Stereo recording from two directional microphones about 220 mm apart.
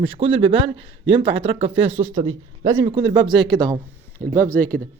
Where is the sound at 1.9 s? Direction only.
65° right (ahead or behind).